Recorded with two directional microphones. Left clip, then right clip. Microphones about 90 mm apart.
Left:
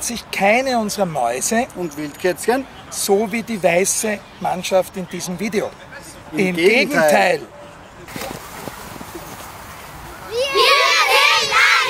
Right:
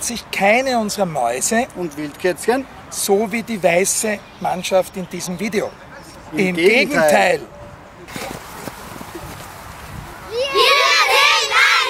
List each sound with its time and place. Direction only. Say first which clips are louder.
0.0 s speech: right 1 dB; 5° right (ahead or behind)
10.3 s children playing: even; 20° left (ahead or behind)
10.8 s child singing: right 1 dB; 5° right (ahead or behind)
11.2 s crowd: even; 5° right (ahead or behind)